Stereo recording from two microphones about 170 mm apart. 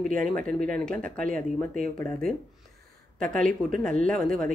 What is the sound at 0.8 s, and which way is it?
Speech, 5° left (ahead or behind).